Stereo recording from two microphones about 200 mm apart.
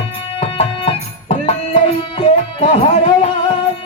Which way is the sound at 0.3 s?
30° left (ahead or behind).